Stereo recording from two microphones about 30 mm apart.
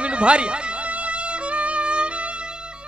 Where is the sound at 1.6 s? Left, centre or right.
Right.